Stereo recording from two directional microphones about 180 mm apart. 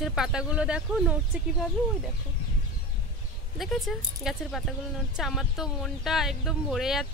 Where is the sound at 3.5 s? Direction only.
Centre (ahead or behind).